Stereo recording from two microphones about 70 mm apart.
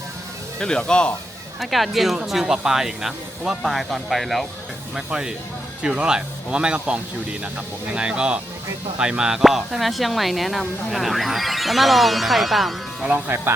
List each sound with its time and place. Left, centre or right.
0.6 s speech: centre
1.5 s speech: centre
13.2 s speech: right